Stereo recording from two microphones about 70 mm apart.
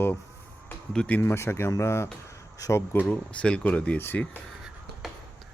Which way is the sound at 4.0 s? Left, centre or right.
Left.